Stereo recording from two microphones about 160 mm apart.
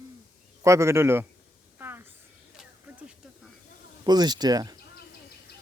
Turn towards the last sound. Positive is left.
turn(degrees=-25)  # may be behind; listen again after turning